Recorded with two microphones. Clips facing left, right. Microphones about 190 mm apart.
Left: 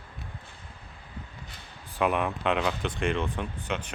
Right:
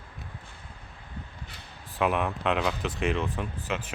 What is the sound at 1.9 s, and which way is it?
Speech, centre (ahead or behind).